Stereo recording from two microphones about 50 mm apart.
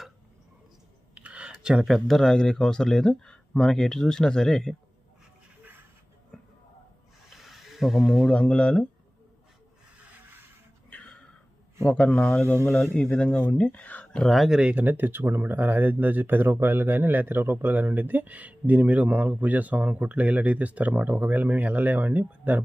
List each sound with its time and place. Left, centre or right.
1.1 s a sound: right
1.8 s speech: centre
2.3 s speech: centre
6.3 s a sound: centre
7.3 s snake: centre
8.3 s speech: centre
10.8 s a sound: left
11.9 s speech: left
14.3 s speech: centre
14.5 s speech: centre
14.8 s speech: right